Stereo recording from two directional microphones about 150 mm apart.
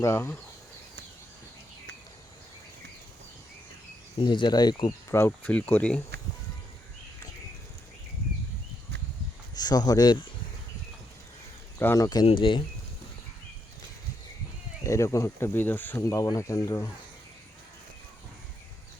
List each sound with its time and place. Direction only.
0.0 s speech: 15° left (ahead or behind)
4.2 s speech: 30° left (ahead or behind)
5.1 s speech: 15° left (ahead or behind)
9.6 s speech: 25° left (ahead or behind)
11.8 s speech: 20° left (ahead or behind)
12.2 s speech: 35° left (ahead or behind)
14.8 s speech: 20° left (ahead or behind)